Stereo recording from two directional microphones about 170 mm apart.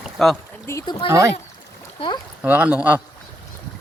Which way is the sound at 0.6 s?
20° left (ahead or behind).